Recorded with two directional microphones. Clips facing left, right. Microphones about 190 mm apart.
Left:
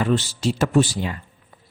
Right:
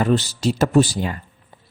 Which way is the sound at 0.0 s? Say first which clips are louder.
Right 2 dB; 40° right (ahead or behind).